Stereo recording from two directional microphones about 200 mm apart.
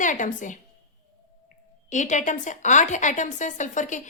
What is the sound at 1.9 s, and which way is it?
A woman's voice, 40° left (ahead or behind).